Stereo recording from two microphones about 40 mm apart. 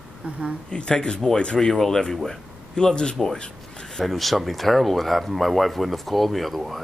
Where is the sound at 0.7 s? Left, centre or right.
Left.